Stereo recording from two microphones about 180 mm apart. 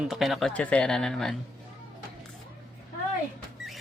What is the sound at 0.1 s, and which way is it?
Speech, centre (ahead or behind).